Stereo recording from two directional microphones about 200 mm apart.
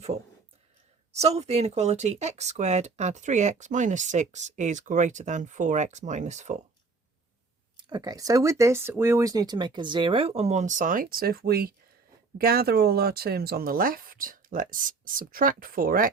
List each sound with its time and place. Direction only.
1.1 s speech: 30° right (ahead or behind)
7.8 s speech: 20° right (ahead or behind); by 16.0 s 45° right (ahead or behind)